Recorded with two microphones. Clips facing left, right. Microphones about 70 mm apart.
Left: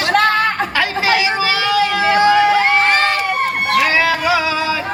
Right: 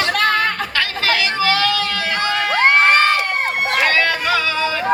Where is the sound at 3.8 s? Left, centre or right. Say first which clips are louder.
Left 2 dB; centre.